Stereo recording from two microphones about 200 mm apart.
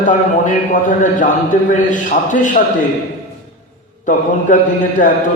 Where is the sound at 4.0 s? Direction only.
40° left (ahead or behind).